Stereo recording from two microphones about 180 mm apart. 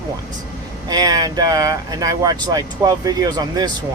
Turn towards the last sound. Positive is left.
turn(degrees=-20)  # may be behind; listen again after turning